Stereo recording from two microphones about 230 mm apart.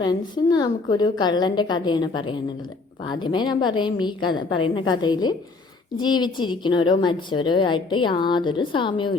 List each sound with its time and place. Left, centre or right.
0.0 s a woman's voice: centre